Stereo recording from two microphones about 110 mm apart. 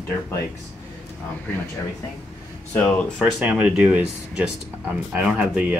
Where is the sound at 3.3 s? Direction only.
10° right (ahead or behind).